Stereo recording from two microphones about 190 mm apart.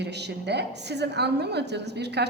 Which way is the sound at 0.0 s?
60° right (ahead or behind).